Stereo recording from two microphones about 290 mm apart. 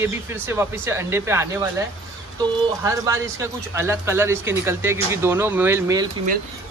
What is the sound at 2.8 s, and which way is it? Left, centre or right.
A man's voice, centre.